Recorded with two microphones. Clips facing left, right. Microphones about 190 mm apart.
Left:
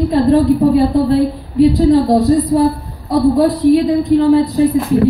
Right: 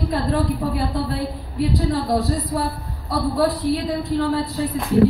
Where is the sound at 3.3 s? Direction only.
20° left (ahead or behind).